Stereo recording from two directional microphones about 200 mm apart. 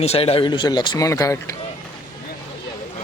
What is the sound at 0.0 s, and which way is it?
Speech, 30° left (ahead or behind).